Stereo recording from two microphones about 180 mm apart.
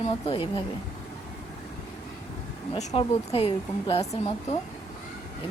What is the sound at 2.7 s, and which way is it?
Speech, 35° left (ahead or behind).